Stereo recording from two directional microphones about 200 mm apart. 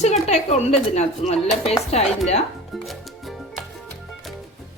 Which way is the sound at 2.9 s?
Centre (ahead or behind).